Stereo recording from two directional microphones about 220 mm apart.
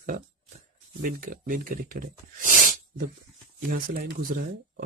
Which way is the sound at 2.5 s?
40° right (ahead or behind).